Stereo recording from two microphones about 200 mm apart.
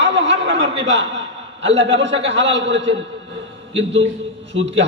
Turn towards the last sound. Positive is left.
turn(degrees=-65)  # may be behind; listen again after turning